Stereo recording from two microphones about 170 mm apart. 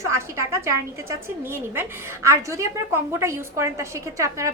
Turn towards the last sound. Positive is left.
turn(degrees=-20)  # may be behind; listen again after turning